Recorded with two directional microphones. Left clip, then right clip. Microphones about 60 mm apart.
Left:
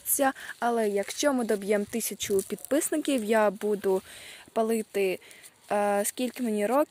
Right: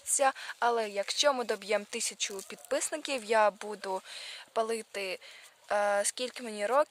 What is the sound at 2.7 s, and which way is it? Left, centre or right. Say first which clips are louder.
Speech: left 5 dB; centre.